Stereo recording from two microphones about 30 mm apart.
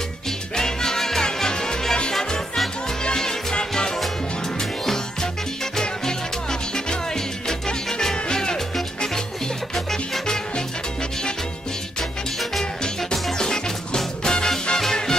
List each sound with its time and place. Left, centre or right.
0.6 s music: centre
3.2 s music: centre
3.7 s salsa music: left
7.2 s music: centre
9.8 s salsa music: centre
10.2 s music: left
12.0 s music: centre
13.1 s music: centre